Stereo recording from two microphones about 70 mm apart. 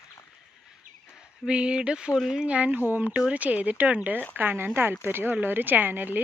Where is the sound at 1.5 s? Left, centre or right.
Centre.